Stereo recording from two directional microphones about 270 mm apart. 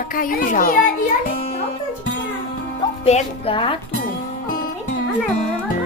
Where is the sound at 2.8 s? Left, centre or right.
Left.